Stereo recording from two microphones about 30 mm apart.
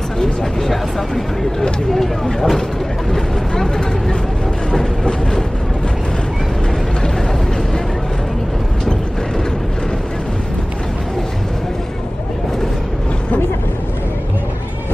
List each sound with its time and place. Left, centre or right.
0.2 s speech: centre